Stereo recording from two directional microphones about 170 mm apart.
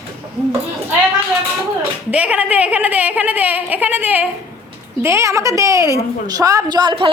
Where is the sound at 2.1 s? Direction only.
10° right (ahead or behind).